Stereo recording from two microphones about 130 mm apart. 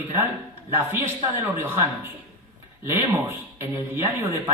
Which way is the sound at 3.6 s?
15° right (ahead or behind).